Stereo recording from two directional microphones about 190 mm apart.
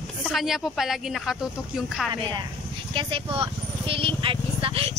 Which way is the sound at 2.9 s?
25° right (ahead or behind).